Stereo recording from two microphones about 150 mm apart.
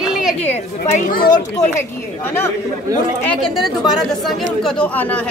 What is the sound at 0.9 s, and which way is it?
Speech, 75° left (ahead or behind).